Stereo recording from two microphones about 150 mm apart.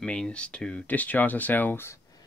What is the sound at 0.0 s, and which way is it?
Speech, 5° left (ahead or behind).